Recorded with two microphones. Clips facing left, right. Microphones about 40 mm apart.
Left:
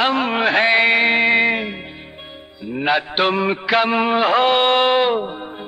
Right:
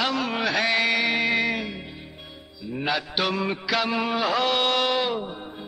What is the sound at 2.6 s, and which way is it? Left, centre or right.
Mantra, left.